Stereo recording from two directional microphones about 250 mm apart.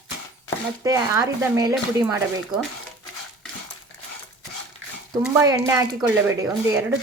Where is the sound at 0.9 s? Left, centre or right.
Centre.